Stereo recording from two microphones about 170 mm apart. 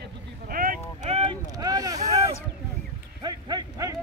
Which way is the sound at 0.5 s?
55° right (ahead or behind).